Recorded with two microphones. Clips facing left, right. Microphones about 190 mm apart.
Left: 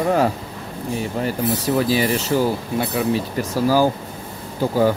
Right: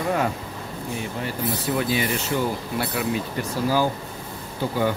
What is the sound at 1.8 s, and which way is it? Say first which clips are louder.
Speech: left 5 dB; 35° left (ahead or behind).